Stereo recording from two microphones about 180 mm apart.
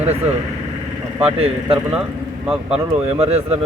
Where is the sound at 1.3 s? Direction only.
35° right (ahead or behind).